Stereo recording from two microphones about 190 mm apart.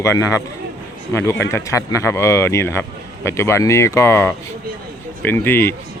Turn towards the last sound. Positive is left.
turn(degrees=10)  # may be behind; listen again after turning